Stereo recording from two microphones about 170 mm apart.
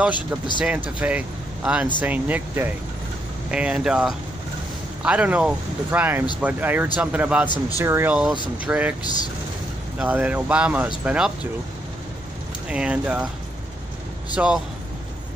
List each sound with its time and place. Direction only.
0.7 s speech: 5° right (ahead or behind)
7.4 s speech: 25° left (ahead or behind)
7.8 s speech: 15° right (ahead or behind)
9.9 s speech: 10° right (ahead or behind)
12.6 s speech: 5° right (ahead or behind)
14.3 s speech: 5° right (ahead or behind)